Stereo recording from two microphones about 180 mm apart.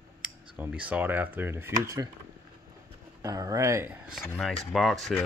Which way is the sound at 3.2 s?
20° right (ahead or behind).